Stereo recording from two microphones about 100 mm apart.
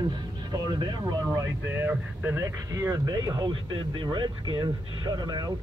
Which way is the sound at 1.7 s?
20° right (ahead or behind).